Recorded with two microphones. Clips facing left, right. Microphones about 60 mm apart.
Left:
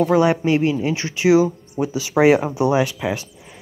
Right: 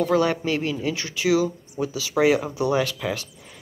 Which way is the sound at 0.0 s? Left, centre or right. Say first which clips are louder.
Left 5 dB; centre.